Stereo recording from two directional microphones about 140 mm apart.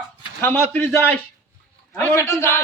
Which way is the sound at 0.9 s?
5° right (ahead or behind).